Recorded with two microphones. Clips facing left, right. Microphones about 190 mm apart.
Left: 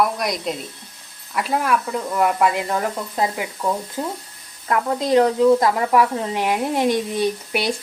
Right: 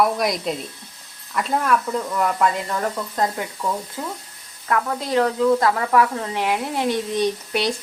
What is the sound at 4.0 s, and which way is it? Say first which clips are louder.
Speech: left 4 dB; 30° left (ahead or behind).